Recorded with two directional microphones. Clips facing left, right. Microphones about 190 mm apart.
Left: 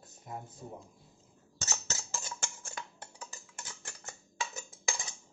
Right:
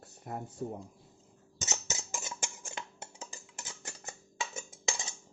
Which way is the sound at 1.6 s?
20° right (ahead or behind).